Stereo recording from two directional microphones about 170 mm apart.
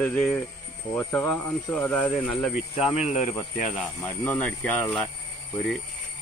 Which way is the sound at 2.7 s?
40° left (ahead or behind).